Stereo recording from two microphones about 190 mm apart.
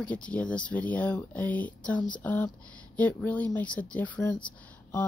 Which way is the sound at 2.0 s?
25° left (ahead or behind).